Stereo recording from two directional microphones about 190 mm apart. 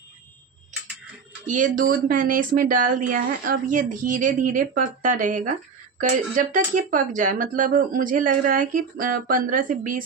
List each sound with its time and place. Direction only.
1.5 s speech: 45° right (ahead or behind)